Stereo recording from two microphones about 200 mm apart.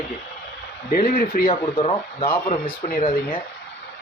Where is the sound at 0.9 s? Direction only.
45° left (ahead or behind).